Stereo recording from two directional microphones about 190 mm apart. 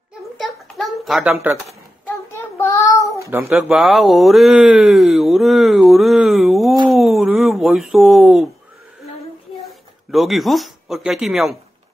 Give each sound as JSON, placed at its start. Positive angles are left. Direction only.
{"t": 0.4, "sound": "a sound", "side_deg": 0}
{"t": 1.3, "sound": "speech", "side_deg": -15}
{"t": 2.1, "sound": "child singing", "side_deg": 15}
{"t": 3.3, "sound": "speech", "side_deg": -15}
{"t": 3.6, "sound": "speech", "side_deg": 0}
{"t": 7.0, "sound": "a sound", "side_deg": 0}
{"t": 9.7, "sound": "speech", "side_deg": 0}